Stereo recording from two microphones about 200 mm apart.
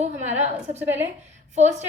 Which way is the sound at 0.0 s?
35° right (ahead or behind).